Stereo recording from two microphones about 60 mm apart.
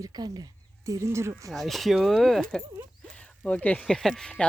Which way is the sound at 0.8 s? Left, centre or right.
Right.